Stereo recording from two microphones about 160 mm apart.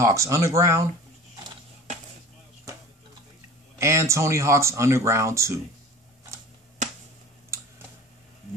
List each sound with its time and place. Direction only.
0.0 s speech: 20° right (ahead or behind)
3.7 s speech: 15° right (ahead or behind)